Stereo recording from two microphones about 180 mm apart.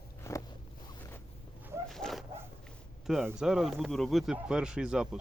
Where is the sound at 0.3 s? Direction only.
15° left (ahead or behind).